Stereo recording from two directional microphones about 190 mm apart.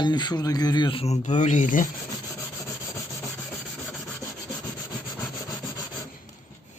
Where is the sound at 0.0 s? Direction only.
20° left (ahead or behind); by 1.9 s 45° left (ahead or behind).